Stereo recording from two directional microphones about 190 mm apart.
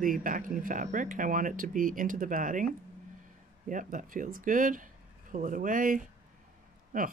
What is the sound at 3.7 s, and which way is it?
Speech, 45° right (ahead or behind).